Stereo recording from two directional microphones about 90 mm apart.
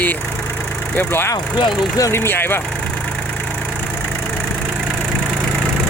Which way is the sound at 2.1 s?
25° left (ahead or behind).